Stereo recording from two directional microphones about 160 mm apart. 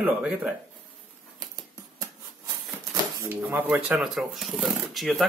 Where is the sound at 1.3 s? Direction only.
25° right (ahead or behind).